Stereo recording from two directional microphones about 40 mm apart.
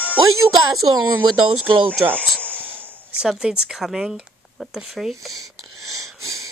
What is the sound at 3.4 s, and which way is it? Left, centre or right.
Speech, centre.